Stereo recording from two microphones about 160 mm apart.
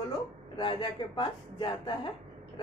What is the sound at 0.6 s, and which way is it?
Speech, 30° left (ahead or behind).